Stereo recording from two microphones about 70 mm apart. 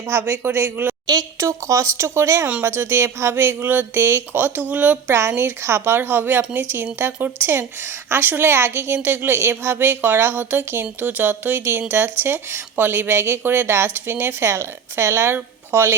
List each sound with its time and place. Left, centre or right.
0.1 s speech: right
1.4 s speech: right
5.0 s speech: right